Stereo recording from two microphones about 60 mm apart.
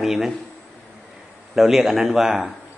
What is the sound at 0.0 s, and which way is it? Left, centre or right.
Speech, centre.